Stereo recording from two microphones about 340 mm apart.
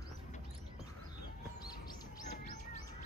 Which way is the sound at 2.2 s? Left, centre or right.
Left.